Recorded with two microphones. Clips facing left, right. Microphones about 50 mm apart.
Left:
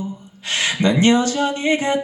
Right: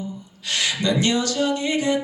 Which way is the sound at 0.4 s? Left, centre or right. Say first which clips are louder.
Left 4 dB; left.